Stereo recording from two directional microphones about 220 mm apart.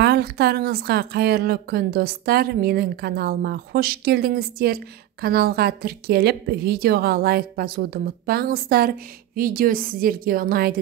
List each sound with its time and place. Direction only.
0.0 s a woman's voice: 50° right (ahead or behind)